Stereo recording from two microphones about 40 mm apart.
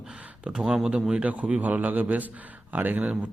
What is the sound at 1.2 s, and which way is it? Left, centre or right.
A man's voice, right.